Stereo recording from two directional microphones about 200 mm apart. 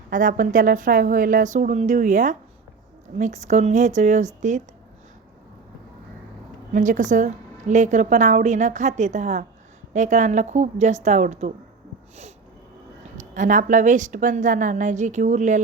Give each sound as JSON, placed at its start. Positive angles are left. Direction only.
{"t": 0.1, "sound": "a woman's voice", "side_deg": -40}
{"t": 6.7, "sound": "a woman's voice", "side_deg": -40}
{"t": 13.1, "sound": "a woman's voice", "side_deg": -40}